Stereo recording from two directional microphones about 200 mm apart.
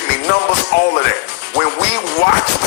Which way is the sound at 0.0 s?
55° left (ahead or behind).